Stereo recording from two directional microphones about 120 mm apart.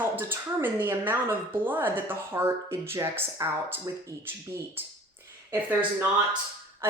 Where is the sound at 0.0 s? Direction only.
15° right (ahead or behind).